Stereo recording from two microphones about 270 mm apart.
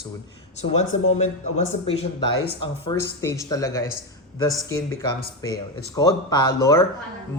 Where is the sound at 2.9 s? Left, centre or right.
Centre.